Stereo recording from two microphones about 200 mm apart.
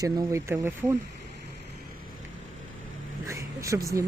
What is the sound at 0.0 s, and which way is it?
Speech, 15° right (ahead or behind).